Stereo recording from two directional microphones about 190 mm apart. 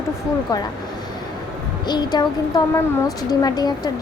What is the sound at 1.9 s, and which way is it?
A woman's voice, 20° left (ahead or behind).